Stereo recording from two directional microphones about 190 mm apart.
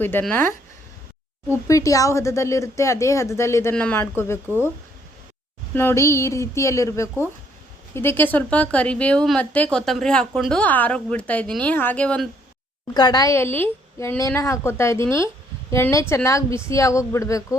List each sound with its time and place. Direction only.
0.0 s a woman's voice: 10° left (ahead or behind)
1.6 s a woman's voice: 15° left (ahead or behind)
5.7 s a woman's voice: 10° left (ahead or behind)
12.9 s a woman's voice: 20° left (ahead or behind)